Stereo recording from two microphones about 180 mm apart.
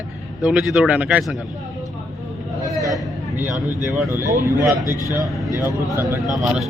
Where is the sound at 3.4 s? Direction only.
10° right (ahead or behind).